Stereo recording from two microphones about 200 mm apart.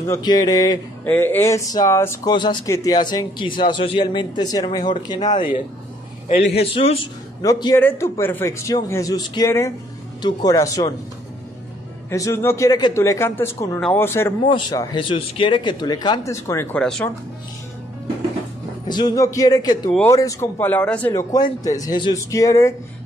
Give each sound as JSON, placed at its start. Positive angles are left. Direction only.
{"t": 0.1, "sound": "speech", "side_deg": 20}
{"t": 6.7, "sound": "speech", "side_deg": 30}
{"t": 7.4, "sound": "a man's voice", "side_deg": 15}
{"t": 12.1, "sound": "a man's voice", "side_deg": 15}
{"t": 18.9, "sound": "a man's voice", "side_deg": 20}
{"t": 21.1, "sound": "a man's voice", "side_deg": 15}